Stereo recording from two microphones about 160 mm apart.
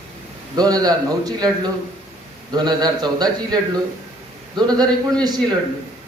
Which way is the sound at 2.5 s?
25° right (ahead or behind).